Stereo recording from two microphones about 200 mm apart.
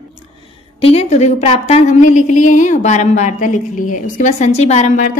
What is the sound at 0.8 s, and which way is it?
A woman's voice, 30° left (ahead or behind).